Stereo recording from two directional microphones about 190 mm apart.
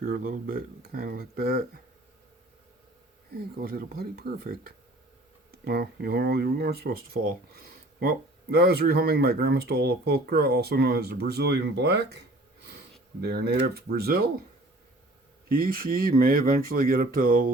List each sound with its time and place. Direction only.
0.0 s speech: 55° right (ahead or behind)
3.3 s speech: 55° right (ahead or behind)
13.2 s speech: 60° right (ahead or behind)
15.4 s speech: 50° right (ahead or behind)